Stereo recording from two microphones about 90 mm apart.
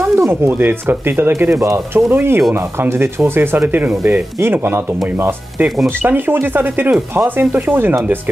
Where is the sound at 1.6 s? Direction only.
35° right (ahead or behind).